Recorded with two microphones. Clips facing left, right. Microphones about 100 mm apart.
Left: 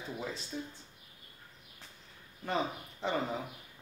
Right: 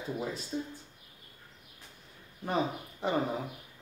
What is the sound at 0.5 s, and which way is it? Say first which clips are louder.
Speech: right 6 dB; 30° right (ahead or behind).